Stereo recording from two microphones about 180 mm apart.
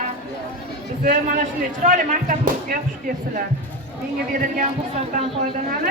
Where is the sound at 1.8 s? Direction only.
45° right (ahead or behind).